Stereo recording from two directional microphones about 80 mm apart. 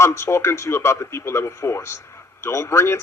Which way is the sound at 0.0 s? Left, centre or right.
Left.